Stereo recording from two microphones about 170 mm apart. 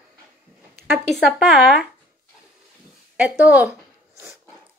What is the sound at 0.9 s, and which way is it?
Speech, centre (ahead or behind).